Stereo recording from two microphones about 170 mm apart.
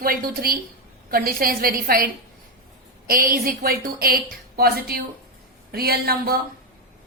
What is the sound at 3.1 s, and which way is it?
A woman's voice, 60° right (ahead or behind).